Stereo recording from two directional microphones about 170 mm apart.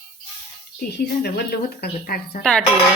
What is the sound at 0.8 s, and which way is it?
A woman's voice, 70° left (ahead or behind).